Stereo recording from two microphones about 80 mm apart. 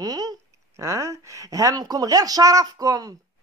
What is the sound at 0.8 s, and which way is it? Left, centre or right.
A woman's voice, right.